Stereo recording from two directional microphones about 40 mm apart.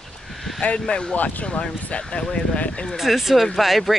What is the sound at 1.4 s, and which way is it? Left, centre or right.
Speech, left.